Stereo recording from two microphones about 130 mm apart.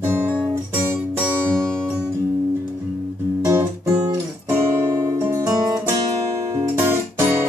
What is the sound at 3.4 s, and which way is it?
Music, 20° right (ahead or behind).